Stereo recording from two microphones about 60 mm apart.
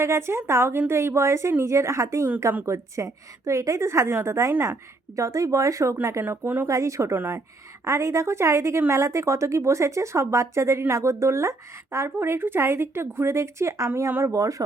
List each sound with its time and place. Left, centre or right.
0.0 s a woman's voice: right
6.2 s speech: right
6.7 s a woman's voice: right
14.1 s speech: right